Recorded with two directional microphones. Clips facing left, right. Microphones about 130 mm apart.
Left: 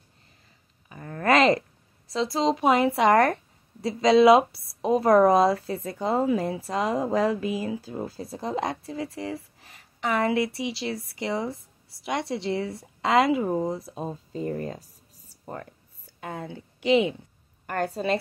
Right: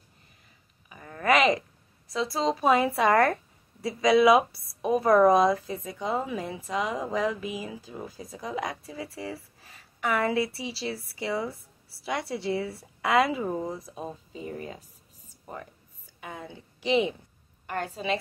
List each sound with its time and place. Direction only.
0.8 s a sound: 40° left (ahead or behind)
2.0 s speech: 25° left (ahead or behind)
16.2 s speech: 30° left (ahead or behind)
16.8 s a woman's voice: 25° right (ahead or behind)
17.6 s a woman's voice: 45° left (ahead or behind)